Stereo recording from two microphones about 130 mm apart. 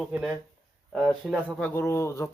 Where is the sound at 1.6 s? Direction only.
15° left (ahead or behind).